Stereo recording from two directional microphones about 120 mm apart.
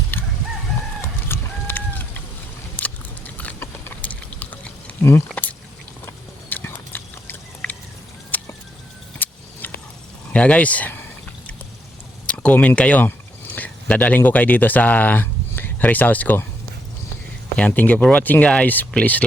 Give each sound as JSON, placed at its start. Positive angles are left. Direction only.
{"t": 0.1, "sound": "crowing", "side_deg": 15}
{"t": 1.3, "sound": "a sound", "side_deg": 15}
{"t": 2.7, "sound": "biting", "side_deg": 15}
{"t": 5.3, "sound": "a sound", "side_deg": 10}
{"t": 9.1, "sound": "keys jangling", "side_deg": 15}
{"t": 10.3, "sound": "speech", "side_deg": 10}
{"t": 12.2, "sound": "speech", "side_deg": 10}
{"t": 17.6, "sound": "speech", "side_deg": 15}